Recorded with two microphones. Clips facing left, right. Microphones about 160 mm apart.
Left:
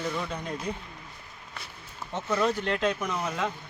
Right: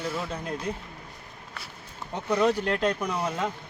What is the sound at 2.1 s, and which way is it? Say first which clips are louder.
Speech: right 3 dB; 15° right (ahead or behind).